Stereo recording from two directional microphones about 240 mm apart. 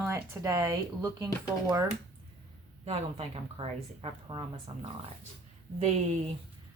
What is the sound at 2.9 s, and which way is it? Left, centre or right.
Speech, right.